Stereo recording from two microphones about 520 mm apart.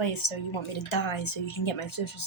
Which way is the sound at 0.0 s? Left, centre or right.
Left.